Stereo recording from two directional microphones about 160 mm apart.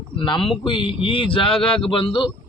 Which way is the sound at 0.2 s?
30° left (ahead or behind).